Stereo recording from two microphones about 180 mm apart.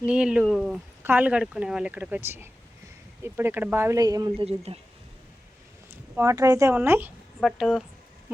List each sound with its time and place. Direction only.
0.0 s speech: 5° right (ahead or behind); by 4.3 s 20° right (ahead or behind)
4.4 s speech: 35° right (ahead or behind)
5.9 s speech: 15° right (ahead or behind)
7.3 s speech: centre (ahead or behind)